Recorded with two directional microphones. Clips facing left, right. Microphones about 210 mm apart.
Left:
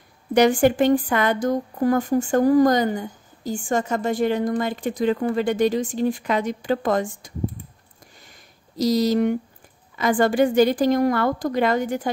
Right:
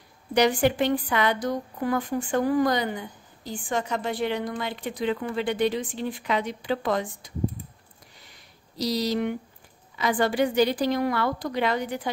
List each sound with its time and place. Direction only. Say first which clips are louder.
0.3 s speech: left 5 dB; 50° left (ahead or behind)
8.2 s a sound: left 2 dB; 45° left (ahead or behind)
9.9 s speech: left 5 dB; 45° left (ahead or behind)